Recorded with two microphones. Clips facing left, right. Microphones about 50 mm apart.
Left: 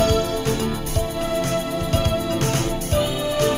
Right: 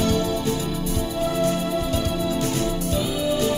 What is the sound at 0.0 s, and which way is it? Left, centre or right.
Music, left.